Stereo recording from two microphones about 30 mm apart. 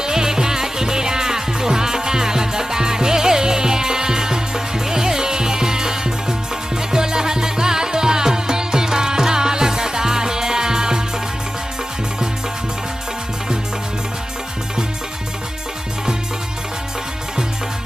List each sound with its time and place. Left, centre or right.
0.0 s music: right